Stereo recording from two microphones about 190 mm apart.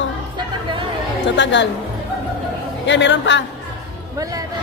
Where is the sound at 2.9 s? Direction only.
70° left (ahead or behind).